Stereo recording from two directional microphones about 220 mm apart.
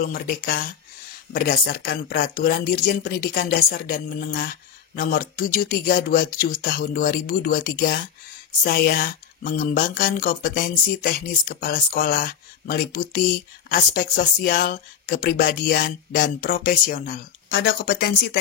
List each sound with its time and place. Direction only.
0.0 s speech: 40° left (ahead or behind)